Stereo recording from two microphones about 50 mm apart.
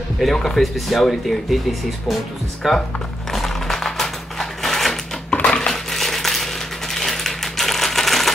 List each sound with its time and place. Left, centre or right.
0.2 s speech: centre
3.3 s a sound: centre
5.3 s crushing: left
5.7 s coin: centre